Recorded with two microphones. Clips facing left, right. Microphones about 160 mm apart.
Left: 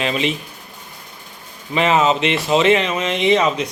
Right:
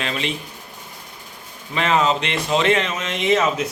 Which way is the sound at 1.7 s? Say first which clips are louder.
Left 3 dB; 5° left (ahead or behind).